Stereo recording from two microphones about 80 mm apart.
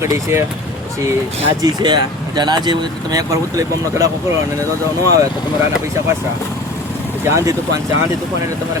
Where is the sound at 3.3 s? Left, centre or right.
Right.